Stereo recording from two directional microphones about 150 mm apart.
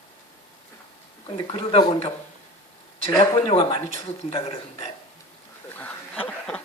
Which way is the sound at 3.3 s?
40° left (ahead or behind).